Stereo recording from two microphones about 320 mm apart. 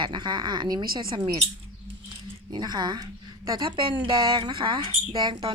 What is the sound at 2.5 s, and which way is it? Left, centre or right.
A woman's voice, centre.